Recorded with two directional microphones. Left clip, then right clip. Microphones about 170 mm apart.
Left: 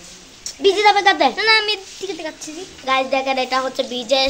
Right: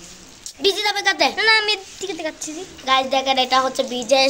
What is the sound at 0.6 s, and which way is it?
Speech, 30° left (ahead or behind).